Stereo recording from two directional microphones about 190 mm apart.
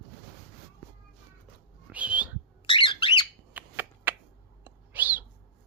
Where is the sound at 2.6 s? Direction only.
25° left (ahead or behind).